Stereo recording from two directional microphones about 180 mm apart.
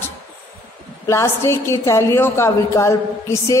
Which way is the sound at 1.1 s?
15° left (ahead or behind).